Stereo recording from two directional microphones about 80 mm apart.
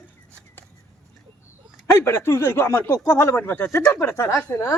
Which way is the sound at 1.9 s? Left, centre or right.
Left.